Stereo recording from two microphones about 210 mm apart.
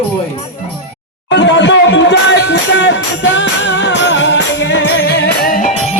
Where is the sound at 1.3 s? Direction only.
60° left (ahead or behind).